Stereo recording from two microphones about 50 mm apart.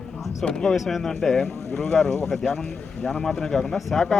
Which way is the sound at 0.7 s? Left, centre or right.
Centre.